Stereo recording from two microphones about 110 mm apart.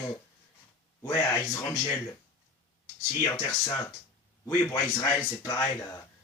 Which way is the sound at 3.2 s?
25° left (ahead or behind).